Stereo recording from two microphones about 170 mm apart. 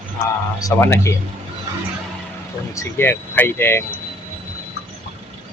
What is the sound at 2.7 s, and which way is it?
Speech, 15° left (ahead or behind).